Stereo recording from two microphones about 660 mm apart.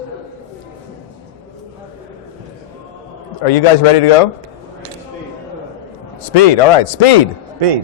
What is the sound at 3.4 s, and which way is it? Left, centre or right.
Speech, left.